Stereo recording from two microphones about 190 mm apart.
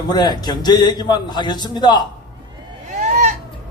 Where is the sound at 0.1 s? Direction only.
20° left (ahead or behind).